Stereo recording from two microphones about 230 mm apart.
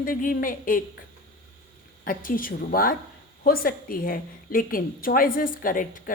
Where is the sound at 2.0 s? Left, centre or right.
Left.